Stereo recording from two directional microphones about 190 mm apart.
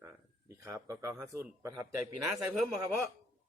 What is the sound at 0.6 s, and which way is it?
Speech, 15° right (ahead or behind).